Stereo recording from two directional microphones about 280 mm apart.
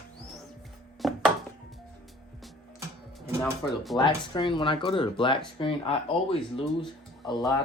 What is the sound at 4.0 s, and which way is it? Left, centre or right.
Speech, centre.